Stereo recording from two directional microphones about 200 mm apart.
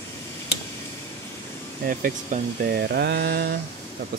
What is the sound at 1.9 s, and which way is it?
Speech, 40° right (ahead or behind).